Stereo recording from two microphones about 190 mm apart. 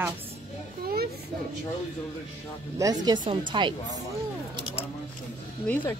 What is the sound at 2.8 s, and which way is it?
Speech, 20° right (ahead or behind).